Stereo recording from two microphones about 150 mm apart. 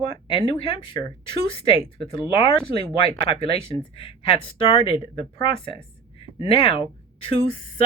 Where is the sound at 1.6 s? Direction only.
35° left (ahead or behind).